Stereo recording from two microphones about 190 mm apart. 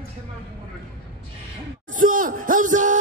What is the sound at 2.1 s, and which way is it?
Music, 45° right (ahead or behind).